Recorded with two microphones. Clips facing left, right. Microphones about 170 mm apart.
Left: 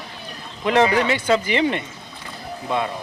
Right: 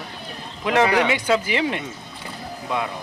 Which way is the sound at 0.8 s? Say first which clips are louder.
Even; 70° right (ahead or behind).